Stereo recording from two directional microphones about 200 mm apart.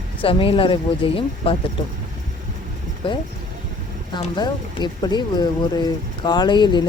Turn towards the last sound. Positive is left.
turn(degrees=25)  # may be behind; listen again after turning